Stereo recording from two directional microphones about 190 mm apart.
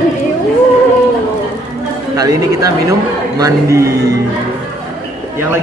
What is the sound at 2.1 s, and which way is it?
A man's voice, 20° right (ahead or behind).